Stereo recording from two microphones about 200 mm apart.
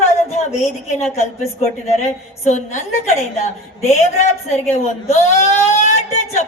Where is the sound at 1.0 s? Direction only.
35° left (ahead or behind).